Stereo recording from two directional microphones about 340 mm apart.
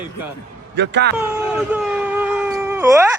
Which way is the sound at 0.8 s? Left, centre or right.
Right.